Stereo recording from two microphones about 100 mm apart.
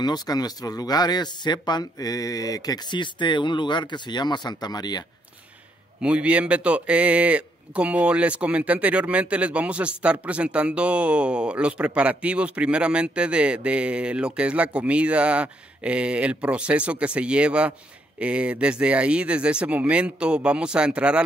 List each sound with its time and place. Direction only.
0.0 s speech: 40° left (ahead or behind)
5.9 s a man's voice: 10° right (ahead or behind)